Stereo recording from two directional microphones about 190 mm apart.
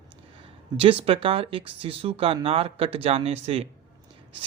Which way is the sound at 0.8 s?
30° right (ahead or behind).